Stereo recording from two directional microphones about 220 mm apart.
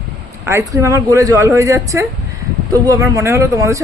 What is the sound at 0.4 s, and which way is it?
Speech, 15° right (ahead or behind).